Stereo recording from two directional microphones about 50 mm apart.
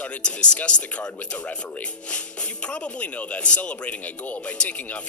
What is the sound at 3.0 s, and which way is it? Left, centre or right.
Speech, left.